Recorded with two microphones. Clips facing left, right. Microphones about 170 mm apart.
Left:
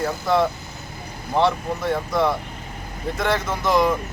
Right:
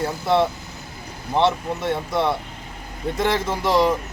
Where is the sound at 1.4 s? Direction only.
25° right (ahead or behind).